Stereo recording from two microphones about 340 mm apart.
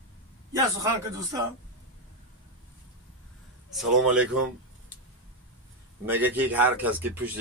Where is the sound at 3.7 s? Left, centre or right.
Centre.